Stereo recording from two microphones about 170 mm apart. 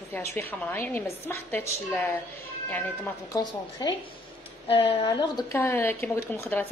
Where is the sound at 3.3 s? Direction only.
20° left (ahead or behind).